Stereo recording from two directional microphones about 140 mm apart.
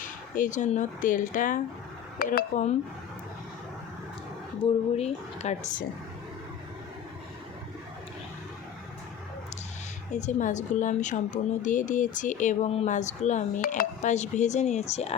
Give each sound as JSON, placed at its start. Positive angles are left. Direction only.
{"t": 0.0, "sound": "speech", "side_deg": 70}
{"t": 2.1, "sound": "speech", "side_deg": 85}
{"t": 4.6, "sound": "a woman's voice", "side_deg": 50}
{"t": 10.1, "sound": "a woman's voice", "side_deg": 60}
{"t": 13.6, "sound": "a woman's voice", "side_deg": 75}